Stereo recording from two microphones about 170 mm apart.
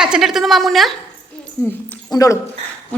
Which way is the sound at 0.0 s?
5° right (ahead or behind).